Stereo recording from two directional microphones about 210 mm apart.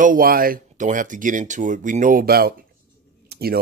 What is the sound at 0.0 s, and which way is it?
Speech, 40° right (ahead or behind).